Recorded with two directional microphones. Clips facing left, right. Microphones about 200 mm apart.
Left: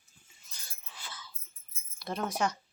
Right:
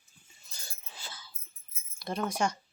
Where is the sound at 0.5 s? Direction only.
30° right (ahead or behind).